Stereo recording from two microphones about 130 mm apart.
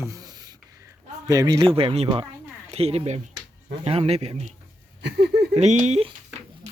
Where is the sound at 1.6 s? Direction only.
45° right (ahead or behind).